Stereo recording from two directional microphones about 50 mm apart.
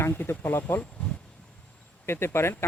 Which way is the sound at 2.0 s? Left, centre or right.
Left.